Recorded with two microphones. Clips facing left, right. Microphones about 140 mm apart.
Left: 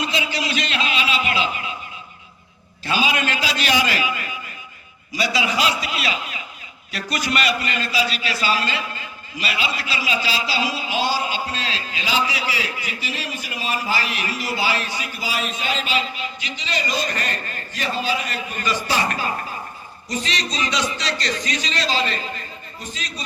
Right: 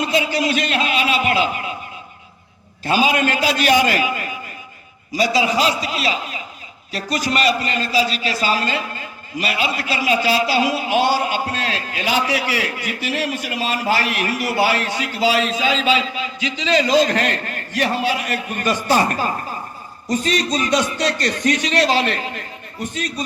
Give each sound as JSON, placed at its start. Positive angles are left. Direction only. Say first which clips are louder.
{"t": 0.0, "sound": "a sound", "louder": "right 6 dB", "side_deg": -50}
{"t": 2.8, "sound": "a man's voice", "louder": "right 5 dB", "side_deg": -45}
{"t": 16.8, "sound": "a man's voice", "louder": "right 9 dB", "side_deg": -90}